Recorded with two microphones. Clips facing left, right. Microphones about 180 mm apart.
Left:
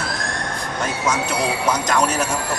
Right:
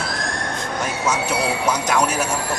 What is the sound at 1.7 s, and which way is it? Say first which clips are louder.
Speech: even; 10° right (ahead or behind).